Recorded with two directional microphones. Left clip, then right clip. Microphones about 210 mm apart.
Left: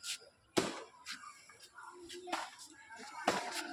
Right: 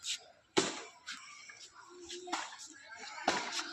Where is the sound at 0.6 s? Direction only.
60° left (ahead or behind).